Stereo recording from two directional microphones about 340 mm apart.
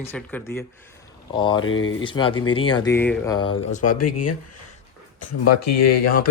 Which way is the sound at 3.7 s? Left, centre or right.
Left.